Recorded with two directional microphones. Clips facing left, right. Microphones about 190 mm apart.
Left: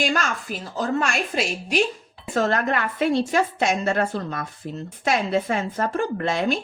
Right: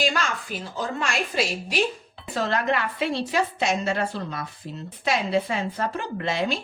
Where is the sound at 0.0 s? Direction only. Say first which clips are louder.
Left 2 dB; 50° left (ahead or behind).